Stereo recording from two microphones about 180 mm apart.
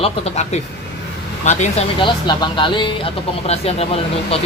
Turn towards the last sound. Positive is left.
turn(degrees=35)  # may be behind; listen again after turning